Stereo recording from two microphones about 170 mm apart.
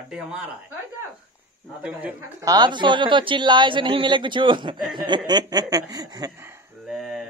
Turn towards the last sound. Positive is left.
turn(degrees=0)  # may be behind; listen again after turning